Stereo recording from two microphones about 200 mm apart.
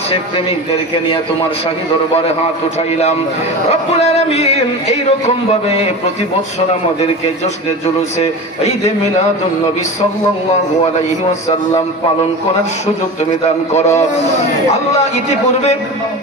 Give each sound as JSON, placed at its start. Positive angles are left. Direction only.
{"t": 4.0, "sound": "a sound", "side_deg": 30}
{"t": 5.2, "sound": "a man's voice", "side_deg": 35}
{"t": 7.8, "sound": "a man's voice", "side_deg": 30}
{"t": 13.7, "sound": "a man's voice", "side_deg": 35}